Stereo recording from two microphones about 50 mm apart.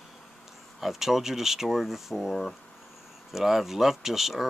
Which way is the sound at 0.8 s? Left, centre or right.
Centre.